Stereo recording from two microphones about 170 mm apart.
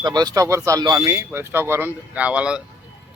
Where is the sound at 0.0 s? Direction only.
25° right (ahead or behind); by 2.6 s 5° right (ahead or behind).